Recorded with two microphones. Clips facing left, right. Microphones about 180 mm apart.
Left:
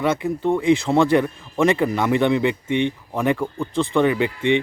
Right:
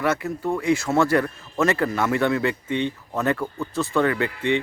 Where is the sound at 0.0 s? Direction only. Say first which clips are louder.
Left 3 dB; 20° left (ahead or behind).